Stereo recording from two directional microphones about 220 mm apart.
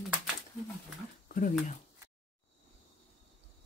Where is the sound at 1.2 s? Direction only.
40° left (ahead or behind).